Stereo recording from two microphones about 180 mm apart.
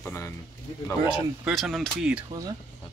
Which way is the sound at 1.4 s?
Centre (ahead or behind).